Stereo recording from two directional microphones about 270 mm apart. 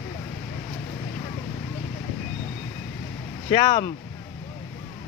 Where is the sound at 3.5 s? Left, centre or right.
Left.